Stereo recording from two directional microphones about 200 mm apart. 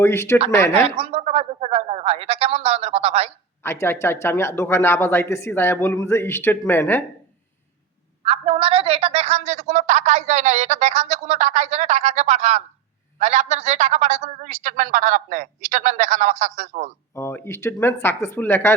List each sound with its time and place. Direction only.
0.0 s speech: 15° left (ahead or behind)
0.9 s a woman's voice: 30° right (ahead or behind)
3.6 s speech: 10° left (ahead or behind)
8.2 s a woman's voice: 30° right (ahead or behind)
17.2 s speech: 15° left (ahead or behind)